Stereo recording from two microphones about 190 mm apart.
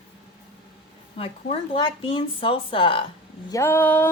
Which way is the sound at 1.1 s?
30° left (ahead or behind).